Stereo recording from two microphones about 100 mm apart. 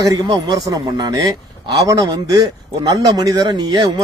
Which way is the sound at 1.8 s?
35° right (ahead or behind).